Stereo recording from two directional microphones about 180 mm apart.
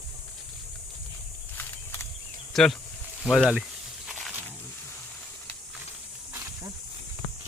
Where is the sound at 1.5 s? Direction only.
15° left (ahead or behind).